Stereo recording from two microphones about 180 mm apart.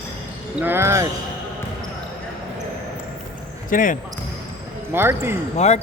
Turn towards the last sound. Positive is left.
turn(degrees=40)  # may be behind; listen again after turning